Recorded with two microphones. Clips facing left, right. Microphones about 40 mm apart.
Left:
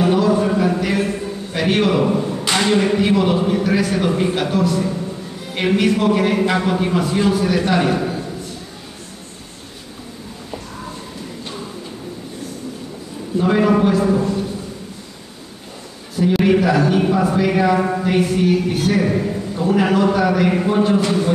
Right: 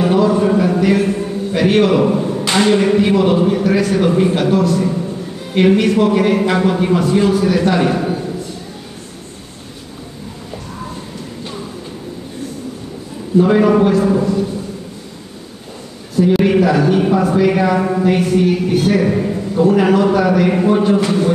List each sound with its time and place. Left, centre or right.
0.0 s a sound: centre
2.5 s speech: centre
13.4 s speech: centre
16.2 s speech: centre